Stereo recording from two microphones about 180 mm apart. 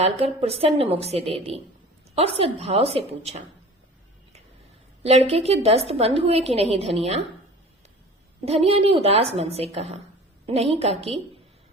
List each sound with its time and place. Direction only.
0.0 s a woman's voice: 35° right (ahead or behind)
5.3 s a woman's voice: 35° right (ahead or behind)
8.4 s a woman's voice: 35° right (ahead or behind)